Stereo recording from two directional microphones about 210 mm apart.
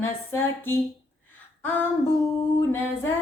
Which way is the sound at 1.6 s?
10° left (ahead or behind).